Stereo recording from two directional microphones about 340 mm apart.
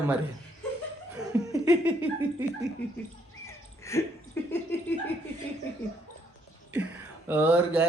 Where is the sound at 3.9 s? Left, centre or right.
Centre.